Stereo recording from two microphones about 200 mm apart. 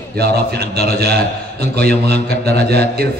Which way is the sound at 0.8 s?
50° right (ahead or behind).